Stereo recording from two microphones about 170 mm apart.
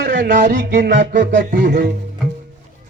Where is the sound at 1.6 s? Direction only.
50° right (ahead or behind).